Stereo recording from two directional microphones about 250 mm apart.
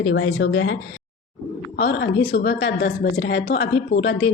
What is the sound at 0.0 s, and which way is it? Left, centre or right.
A woman's voice, left.